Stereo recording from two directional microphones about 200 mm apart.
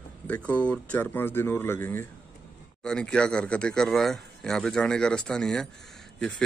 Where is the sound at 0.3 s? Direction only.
5° left (ahead or behind).